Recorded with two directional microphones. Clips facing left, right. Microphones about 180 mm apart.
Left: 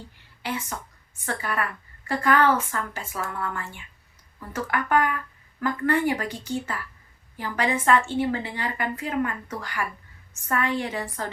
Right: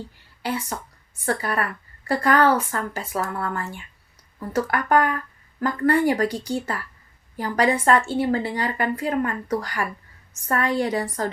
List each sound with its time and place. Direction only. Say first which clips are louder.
0.4 s a woman's voice: right 4 dB; 35° right (ahead or behind)